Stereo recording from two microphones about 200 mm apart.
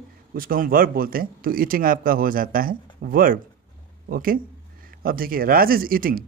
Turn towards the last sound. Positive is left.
turn(degrees=-45)  # may be behind; listen again after turning